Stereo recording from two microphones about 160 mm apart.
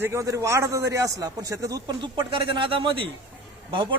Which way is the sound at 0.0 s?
15° right (ahead or behind).